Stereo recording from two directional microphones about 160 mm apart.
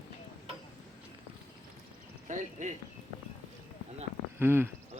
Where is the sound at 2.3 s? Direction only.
50° right (ahead or behind).